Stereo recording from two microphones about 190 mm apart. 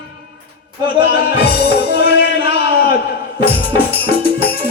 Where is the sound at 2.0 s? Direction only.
55° left (ahead or behind).